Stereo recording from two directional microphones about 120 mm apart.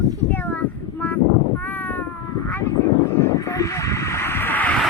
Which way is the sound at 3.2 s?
25° left (ahead or behind).